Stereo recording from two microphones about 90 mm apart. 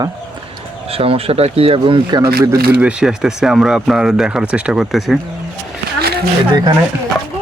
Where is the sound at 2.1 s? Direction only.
50° right (ahead or behind).